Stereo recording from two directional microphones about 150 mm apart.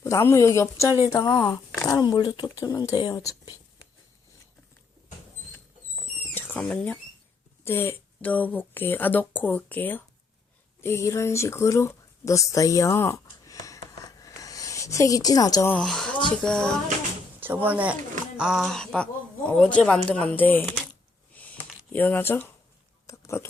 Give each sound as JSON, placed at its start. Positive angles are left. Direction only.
{"t": 0.0, "sound": "speech", "side_deg": 20}
{"t": 6.3, "sound": "speech", "side_deg": 10}
{"t": 14.2, "sound": "a sound", "side_deg": 25}
{"t": 15.7, "sound": "speech", "side_deg": 5}
{"t": 17.4, "sound": "speech", "side_deg": -15}
{"t": 21.3, "sound": "a sound", "side_deg": 10}